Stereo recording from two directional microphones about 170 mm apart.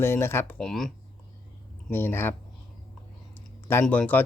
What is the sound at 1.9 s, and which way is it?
Speech, 15° left (ahead or behind).